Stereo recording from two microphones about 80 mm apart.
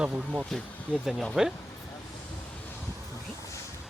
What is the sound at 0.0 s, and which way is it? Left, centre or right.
Speech, centre.